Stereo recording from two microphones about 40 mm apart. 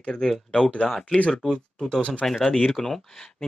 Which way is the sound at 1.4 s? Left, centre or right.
Centre.